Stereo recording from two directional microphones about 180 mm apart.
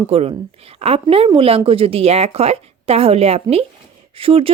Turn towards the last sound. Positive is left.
turn(degrees=-30)  # may be behind; listen again after turning